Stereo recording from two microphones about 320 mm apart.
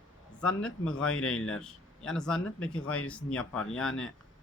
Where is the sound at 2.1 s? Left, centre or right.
Centre.